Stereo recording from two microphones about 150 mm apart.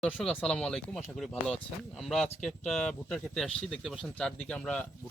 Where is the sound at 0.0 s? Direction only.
5° left (ahead or behind).